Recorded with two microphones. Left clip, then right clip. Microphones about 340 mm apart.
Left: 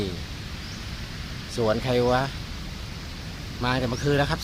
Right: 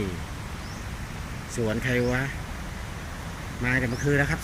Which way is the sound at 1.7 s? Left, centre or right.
Left.